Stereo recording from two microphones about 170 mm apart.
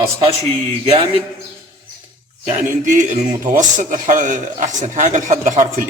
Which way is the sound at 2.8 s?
45° right (ahead or behind).